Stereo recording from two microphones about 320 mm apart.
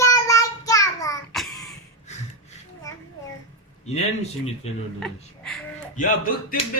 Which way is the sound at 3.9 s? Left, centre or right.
Centre.